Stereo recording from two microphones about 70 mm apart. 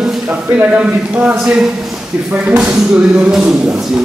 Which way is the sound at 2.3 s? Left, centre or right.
Centre.